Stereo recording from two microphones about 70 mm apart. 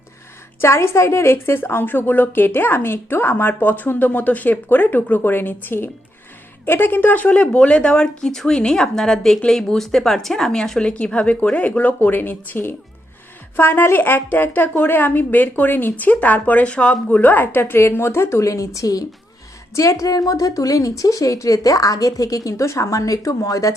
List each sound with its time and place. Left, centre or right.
0.6 s a woman's voice: left